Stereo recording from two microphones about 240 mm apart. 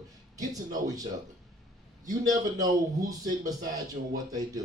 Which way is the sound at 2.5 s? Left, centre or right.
Centre.